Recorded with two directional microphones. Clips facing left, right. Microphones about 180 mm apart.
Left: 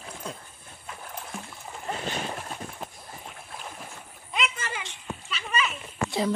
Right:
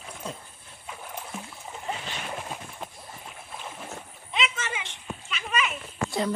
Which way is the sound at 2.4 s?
5° right (ahead or behind).